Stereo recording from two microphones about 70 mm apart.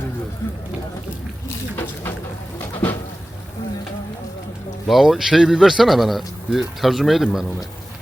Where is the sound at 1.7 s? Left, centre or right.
Left.